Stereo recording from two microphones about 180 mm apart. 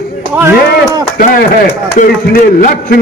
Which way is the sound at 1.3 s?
50° left (ahead or behind).